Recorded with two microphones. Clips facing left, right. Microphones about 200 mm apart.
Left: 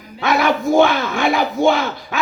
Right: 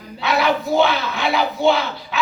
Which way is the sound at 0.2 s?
50° left (ahead or behind).